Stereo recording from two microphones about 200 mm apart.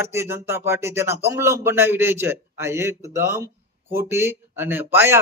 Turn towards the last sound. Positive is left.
turn(degrees=-10)  # may be behind; listen again after turning